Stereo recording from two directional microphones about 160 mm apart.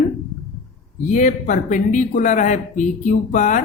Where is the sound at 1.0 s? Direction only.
55° left (ahead or behind).